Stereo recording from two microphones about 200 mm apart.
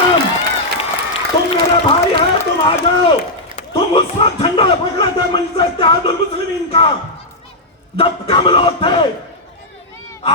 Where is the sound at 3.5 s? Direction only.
25° left (ahead or behind).